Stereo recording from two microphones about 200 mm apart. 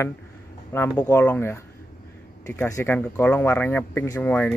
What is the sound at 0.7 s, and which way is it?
Speech, 10° left (ahead or behind).